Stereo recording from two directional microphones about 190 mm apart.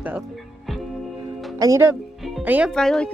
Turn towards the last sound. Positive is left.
turn(degrees=5)  # may be behind; listen again after turning